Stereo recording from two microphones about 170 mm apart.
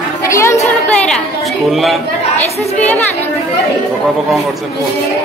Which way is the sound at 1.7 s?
Centre (ahead or behind).